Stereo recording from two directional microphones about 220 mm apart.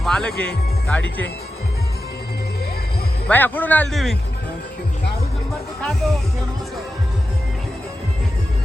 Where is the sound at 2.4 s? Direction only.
45° left (ahead or behind).